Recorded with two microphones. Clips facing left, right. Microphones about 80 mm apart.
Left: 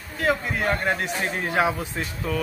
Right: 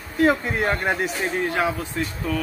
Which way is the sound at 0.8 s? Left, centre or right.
Centre.